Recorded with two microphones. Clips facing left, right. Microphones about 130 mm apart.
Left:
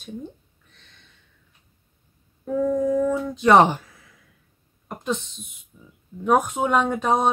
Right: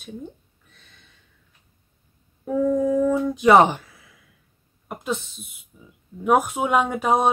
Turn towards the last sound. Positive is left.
turn(degrees=-10)  # may be behind; listen again after turning